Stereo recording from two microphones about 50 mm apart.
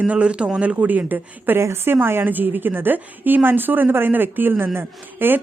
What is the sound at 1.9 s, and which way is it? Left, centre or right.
Speech, right.